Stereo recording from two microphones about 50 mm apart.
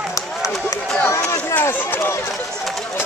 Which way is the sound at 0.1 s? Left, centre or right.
Left.